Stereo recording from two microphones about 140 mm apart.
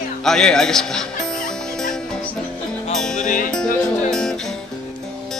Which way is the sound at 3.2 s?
70° left (ahead or behind).